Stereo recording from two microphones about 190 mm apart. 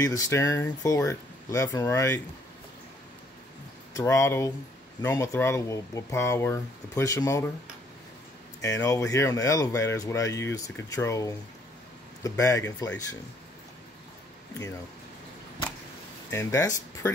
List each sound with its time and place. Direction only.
0.0 s speech: 15° left (ahead or behind)
3.9 s speech: 15° left (ahead or behind)
8.5 s speech: 15° left (ahead or behind)
16.3 s speech: 15° left (ahead or behind)